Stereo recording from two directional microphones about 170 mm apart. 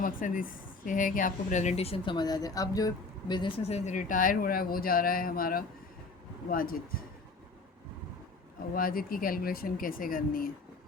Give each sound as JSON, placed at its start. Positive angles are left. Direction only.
{"t": 0.0, "sound": "speech", "side_deg": 55}
{"t": 8.7, "sound": "speech", "side_deg": 55}